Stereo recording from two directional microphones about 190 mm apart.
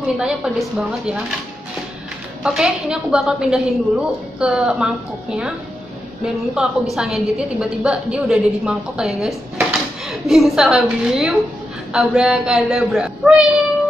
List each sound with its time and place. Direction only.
0.2 s a woman's voice: centre (ahead or behind)
2.4 s a woman's voice: 5° right (ahead or behind)